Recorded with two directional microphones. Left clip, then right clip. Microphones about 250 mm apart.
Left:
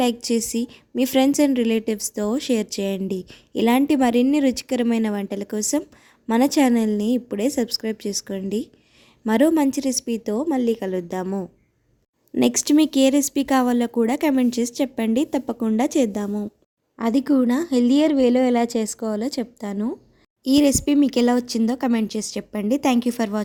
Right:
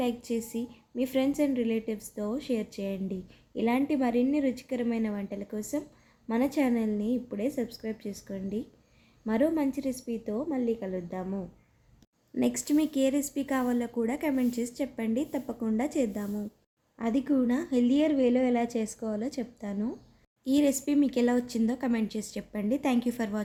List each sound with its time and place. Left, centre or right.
0.0 s speech: left